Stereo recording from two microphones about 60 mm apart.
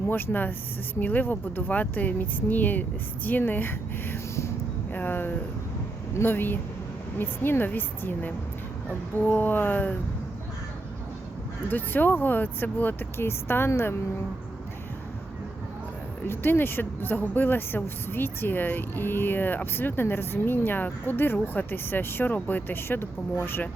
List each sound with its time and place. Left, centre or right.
0.1 s speech: left
11.7 s speech: left
13.1 s speech: left
16.2 s speech: left